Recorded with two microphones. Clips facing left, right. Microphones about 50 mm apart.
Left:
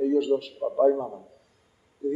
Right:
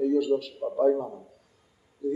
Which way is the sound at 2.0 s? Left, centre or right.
Left.